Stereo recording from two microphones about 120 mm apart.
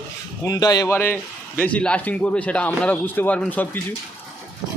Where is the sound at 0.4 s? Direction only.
30° left (ahead or behind).